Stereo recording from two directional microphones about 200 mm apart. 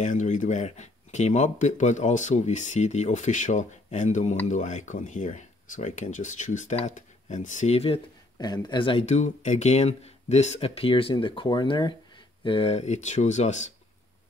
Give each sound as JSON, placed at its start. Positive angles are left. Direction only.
{"t": 0.0, "sound": "speech", "side_deg": 40}